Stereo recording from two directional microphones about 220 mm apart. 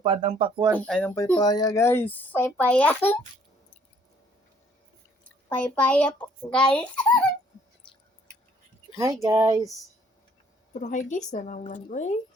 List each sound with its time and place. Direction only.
0.0 s speech: 20° right (ahead or behind)
0.9 s speech: 5° left (ahead or behind)
5.5 s a child's voice: 5° left (ahead or behind)
9.2 s a sound: 15° right (ahead or behind)
10.8 s speech: 35° left (ahead or behind)